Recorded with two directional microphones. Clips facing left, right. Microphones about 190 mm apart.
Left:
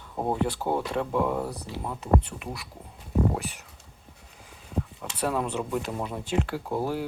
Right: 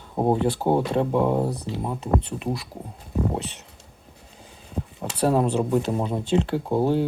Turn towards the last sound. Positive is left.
turn(degrees=-25)  # may be behind; listen again after turning